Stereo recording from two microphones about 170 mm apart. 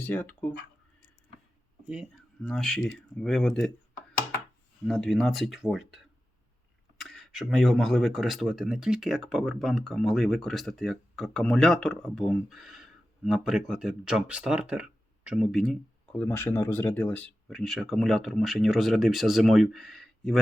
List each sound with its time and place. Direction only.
0.0 s speech: 10° left (ahead or behind)
2.4 s speech: 5° left (ahead or behind)
4.9 s speech: centre (ahead or behind)
7.0 s speech: centre (ahead or behind)
16.2 s speech: 10° left (ahead or behind)